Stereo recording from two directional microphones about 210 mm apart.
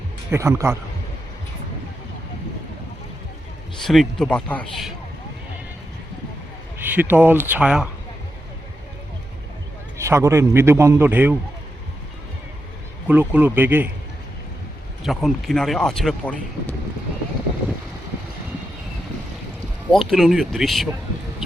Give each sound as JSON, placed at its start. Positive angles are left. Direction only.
{"t": 0.3, "sound": "a man's voice", "side_deg": -15}
{"t": 3.8, "sound": "speech", "side_deg": 0}
{"t": 6.7, "sound": "a man's voice", "side_deg": -10}
{"t": 10.0, "sound": "a man's voice", "side_deg": -15}
{"t": 13.1, "sound": "a man's voice", "side_deg": -10}
{"t": 15.0, "sound": "speech", "side_deg": 0}
{"t": 19.9, "sound": "speech", "side_deg": 0}